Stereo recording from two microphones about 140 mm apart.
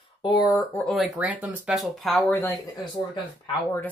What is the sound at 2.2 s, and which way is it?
Speech, 15° left (ahead or behind).